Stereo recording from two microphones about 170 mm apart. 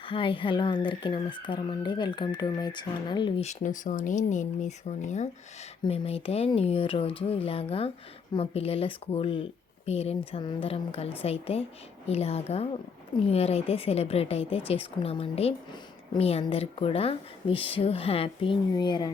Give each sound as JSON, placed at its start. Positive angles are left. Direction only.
{"t": 0.0, "sound": "speech", "side_deg": 30}
{"t": 3.4, "sound": "speech", "side_deg": 45}